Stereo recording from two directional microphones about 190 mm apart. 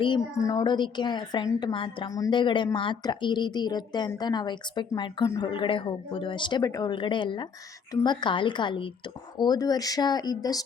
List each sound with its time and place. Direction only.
0.0 s a woman's voice: 20° left (ahead or behind)